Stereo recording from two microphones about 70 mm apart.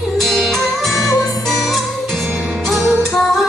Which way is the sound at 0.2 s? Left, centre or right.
Centre.